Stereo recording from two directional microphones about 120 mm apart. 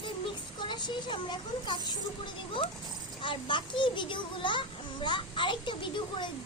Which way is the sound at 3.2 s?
45° left (ahead or behind).